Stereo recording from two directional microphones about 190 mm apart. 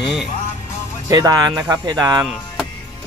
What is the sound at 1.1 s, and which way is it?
Speech, 20° right (ahead or behind).